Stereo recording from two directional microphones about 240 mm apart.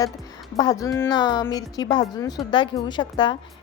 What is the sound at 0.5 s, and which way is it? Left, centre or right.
A woman's voice, centre.